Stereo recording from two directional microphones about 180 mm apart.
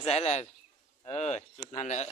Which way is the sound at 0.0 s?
35° left (ahead or behind).